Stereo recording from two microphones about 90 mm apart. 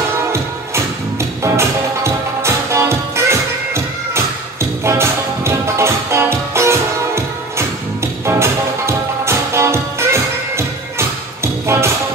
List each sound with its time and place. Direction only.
1.4 s music: 30° right (ahead or behind)